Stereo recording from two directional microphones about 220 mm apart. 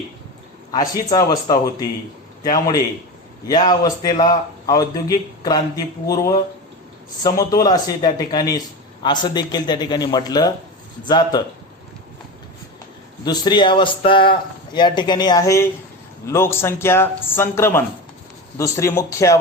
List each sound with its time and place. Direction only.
0.7 s a man's voice: 15° left (ahead or behind)
13.2 s a man's voice: 20° left (ahead or behind)